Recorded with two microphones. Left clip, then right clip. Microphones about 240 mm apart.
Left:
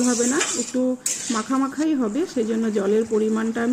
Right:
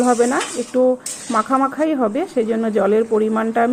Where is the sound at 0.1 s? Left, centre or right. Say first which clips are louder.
Right 7 dB; right.